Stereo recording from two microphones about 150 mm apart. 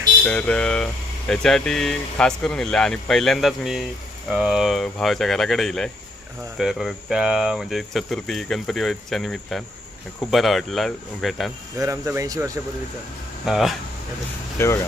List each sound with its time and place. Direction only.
0.3 s speech: 10° left (ahead or behind)
11.8 s speech: 20° right (ahead or behind)
13.4 s speech: centre (ahead or behind)
14.6 s speech: 20° left (ahead or behind)